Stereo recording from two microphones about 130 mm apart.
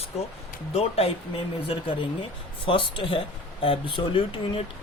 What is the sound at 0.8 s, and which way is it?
Speech, 50° left (ahead or behind).